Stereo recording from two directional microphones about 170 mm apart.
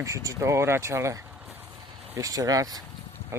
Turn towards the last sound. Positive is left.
turn(degrees=-15)  # may be behind; listen again after turning